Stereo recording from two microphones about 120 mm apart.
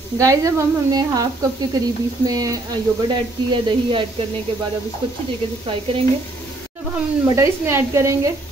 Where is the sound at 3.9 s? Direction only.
45° right (ahead or behind).